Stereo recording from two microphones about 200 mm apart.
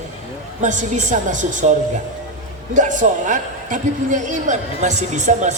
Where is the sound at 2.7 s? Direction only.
40° right (ahead or behind).